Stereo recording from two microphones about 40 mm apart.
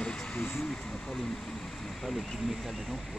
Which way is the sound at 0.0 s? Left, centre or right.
Left.